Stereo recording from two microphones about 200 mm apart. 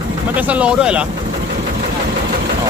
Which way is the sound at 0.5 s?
5° right (ahead or behind).